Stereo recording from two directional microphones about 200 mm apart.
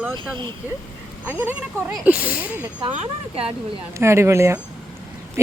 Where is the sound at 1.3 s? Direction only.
10° right (ahead or behind).